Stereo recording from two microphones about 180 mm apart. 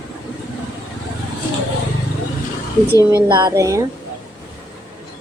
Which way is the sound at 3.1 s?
20° right (ahead or behind).